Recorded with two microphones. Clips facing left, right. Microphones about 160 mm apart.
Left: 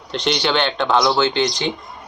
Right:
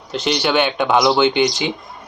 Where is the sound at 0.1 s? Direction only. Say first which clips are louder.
Right 1 dB; 5° right (ahead or behind).